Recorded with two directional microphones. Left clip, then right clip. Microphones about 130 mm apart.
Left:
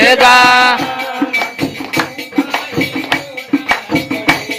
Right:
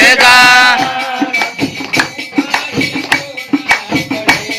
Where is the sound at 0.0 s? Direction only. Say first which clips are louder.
Right 1 dB; 30° left (ahead or behind).